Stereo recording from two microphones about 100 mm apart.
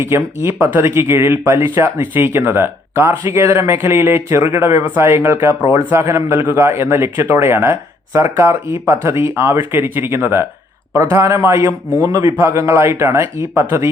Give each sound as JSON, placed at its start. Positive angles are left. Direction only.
{"t": 0.0, "sound": "speech", "side_deg": -25}